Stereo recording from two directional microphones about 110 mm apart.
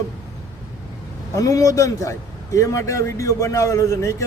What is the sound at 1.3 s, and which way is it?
A man's voice, 30° left (ahead or behind).